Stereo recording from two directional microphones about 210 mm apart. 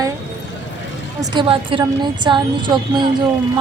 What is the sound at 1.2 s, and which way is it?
A woman's voice, 25° right (ahead or behind).